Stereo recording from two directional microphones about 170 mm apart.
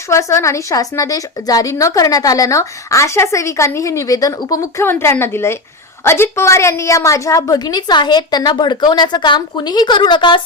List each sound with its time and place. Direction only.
0.1 s a woman's voice: 15° left (ahead or behind)